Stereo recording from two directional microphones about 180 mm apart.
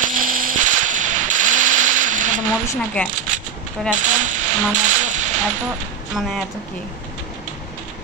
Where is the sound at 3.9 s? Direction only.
45° right (ahead or behind).